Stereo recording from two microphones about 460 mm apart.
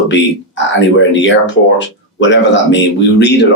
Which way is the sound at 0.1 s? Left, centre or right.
Left.